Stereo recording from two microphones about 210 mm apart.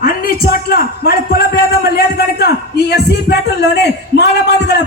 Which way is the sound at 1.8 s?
45° left (ahead or behind).